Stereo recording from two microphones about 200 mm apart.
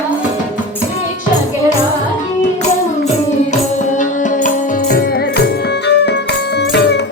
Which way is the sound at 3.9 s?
40° left (ahead or behind).